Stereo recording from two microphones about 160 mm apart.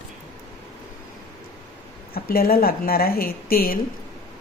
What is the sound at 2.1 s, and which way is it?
Speech, 70° left (ahead or behind).